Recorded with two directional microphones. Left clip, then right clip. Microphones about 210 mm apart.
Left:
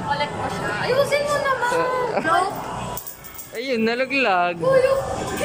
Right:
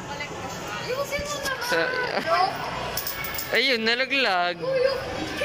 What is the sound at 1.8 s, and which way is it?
Speech, 5° left (ahead or behind).